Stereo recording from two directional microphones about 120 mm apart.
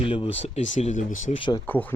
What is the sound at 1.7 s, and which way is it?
Speech, 15° left (ahead or behind).